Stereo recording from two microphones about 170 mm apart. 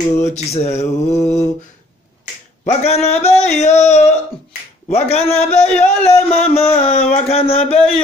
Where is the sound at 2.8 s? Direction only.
40° left (ahead or behind).